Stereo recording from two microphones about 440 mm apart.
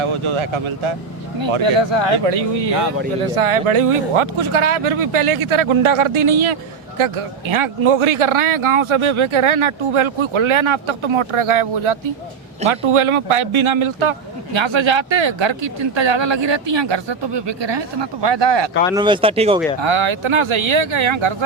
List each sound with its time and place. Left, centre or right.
0.0 s speech: right
1.4 s speech: right
3.7 s speech: right
18.9 s speech: centre
19.8 s speech: right